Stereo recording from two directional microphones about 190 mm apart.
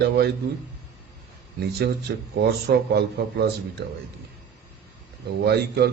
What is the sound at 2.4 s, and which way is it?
A man's voice, 60° right (ahead or behind).